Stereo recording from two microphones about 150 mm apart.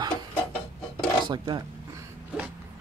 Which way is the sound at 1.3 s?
30° right (ahead or behind).